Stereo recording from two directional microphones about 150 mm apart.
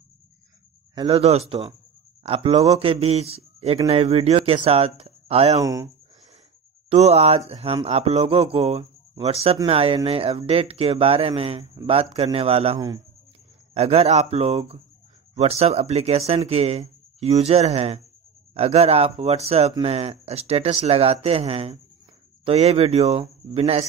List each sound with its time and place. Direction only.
0.9 s a man's voice: 35° right (ahead or behind)
5.6 s speech: 25° right (ahead or behind)
6.9 s a man's voice: 45° right (ahead or behind)